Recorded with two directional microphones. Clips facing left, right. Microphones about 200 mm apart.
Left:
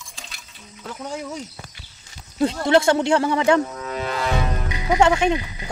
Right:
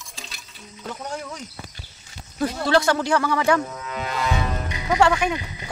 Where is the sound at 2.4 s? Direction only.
20° left (ahead or behind).